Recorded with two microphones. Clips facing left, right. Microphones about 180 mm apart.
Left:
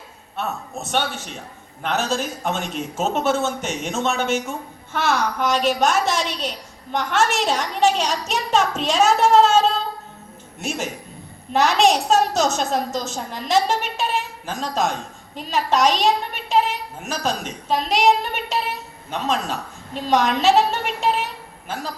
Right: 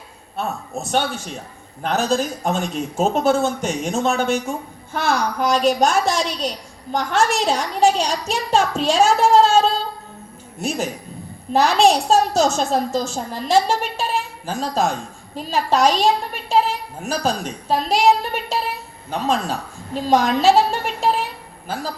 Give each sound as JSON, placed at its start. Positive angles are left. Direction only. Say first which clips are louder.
{"t": 0.8, "sound": "a woman's voice", "louder": "right 3 dB", "side_deg": -35}